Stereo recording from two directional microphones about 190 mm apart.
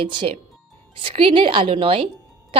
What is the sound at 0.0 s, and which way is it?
A woman's voice, 25° right (ahead or behind).